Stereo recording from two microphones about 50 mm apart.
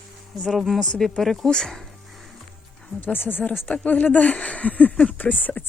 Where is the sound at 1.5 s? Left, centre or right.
Centre.